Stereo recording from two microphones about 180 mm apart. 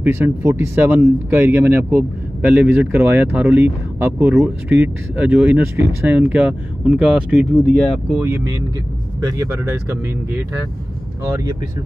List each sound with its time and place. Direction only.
0.0 s speech: 15° right (ahead or behind)
8.2 s speech: 15° right (ahead or behind)